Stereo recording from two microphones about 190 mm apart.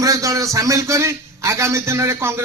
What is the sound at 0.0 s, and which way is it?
A man's voice, 15° right (ahead or behind).